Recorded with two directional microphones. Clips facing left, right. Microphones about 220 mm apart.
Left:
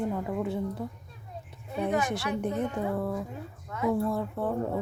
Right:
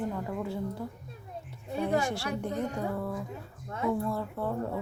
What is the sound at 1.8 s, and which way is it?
Speech, 20° left (ahead or behind).